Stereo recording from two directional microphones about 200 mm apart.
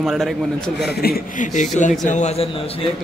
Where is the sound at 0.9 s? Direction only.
50° left (ahead or behind); by 2.9 s 30° left (ahead or behind).